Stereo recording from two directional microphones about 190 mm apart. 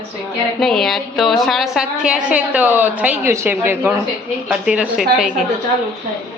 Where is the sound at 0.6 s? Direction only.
Centre (ahead or behind).